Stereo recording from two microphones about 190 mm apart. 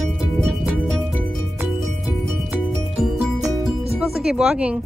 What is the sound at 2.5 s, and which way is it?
Music, centre (ahead or behind).